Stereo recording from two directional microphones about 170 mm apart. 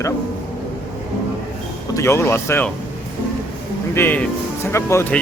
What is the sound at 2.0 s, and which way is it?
Speech, 15° left (ahead or behind).